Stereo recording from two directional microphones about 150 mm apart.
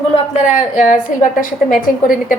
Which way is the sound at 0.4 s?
55° left (ahead or behind).